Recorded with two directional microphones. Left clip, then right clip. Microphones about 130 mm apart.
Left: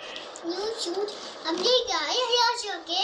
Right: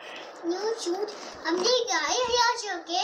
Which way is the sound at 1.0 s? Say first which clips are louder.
Left 1 dB; centre (ahead or behind).